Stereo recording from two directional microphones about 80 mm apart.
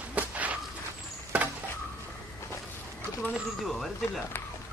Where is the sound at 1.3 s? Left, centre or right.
Centre.